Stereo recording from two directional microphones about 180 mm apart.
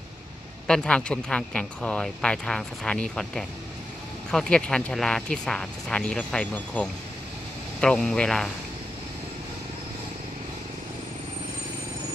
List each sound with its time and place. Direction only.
0.7 s speech: 5° left (ahead or behind)